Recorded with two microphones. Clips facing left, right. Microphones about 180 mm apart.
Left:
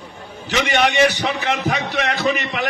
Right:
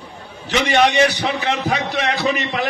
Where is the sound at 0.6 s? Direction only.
40° right (ahead or behind).